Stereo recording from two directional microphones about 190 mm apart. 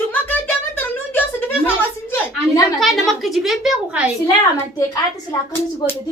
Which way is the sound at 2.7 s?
Centre (ahead or behind).